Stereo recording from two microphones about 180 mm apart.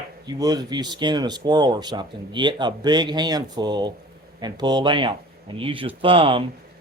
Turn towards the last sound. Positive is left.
turn(degrees=-30)  # may be behind; listen again after turning